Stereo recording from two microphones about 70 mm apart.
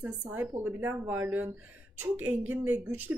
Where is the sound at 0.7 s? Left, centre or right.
Right.